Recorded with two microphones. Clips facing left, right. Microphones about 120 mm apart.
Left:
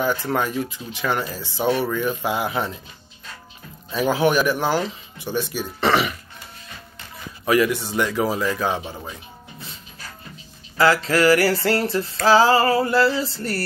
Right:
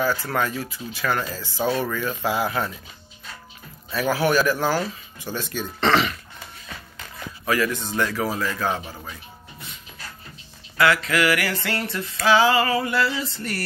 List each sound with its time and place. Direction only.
0.0 s speech: 20° left (ahead or behind)
3.9 s speech: 15° left (ahead or behind)
7.4 s speech: 20° left (ahead or behind)
10.8 s music: 30° left (ahead or behind)